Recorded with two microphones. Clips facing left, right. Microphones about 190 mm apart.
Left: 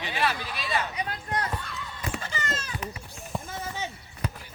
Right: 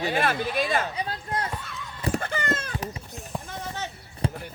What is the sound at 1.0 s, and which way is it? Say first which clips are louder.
Speech: right 1 dB; 30° right (ahead or behind).